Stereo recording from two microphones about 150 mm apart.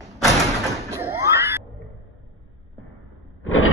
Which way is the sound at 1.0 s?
15° right (ahead or behind).